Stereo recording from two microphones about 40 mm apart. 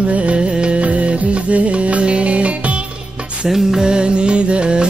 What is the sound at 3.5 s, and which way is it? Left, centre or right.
Music, centre.